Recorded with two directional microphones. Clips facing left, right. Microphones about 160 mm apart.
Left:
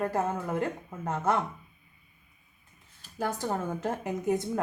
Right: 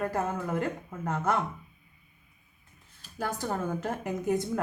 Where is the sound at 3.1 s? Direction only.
20° left (ahead or behind).